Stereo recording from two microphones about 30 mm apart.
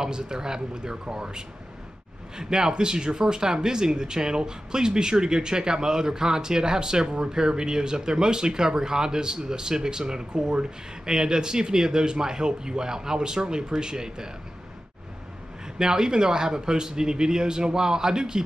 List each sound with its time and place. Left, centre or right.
0.0 s speech: right
15.8 s speech: right